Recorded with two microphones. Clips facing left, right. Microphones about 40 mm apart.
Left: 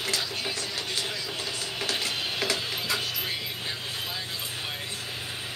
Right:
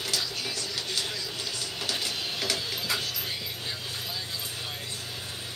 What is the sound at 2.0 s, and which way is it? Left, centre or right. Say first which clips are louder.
Stir: left 3 dB; left.